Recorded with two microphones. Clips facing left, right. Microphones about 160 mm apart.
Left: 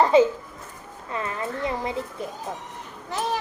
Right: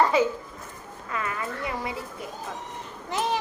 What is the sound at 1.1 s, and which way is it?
Speech, 30° left (ahead or behind).